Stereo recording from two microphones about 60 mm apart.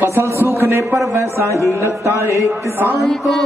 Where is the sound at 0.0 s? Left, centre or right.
Right.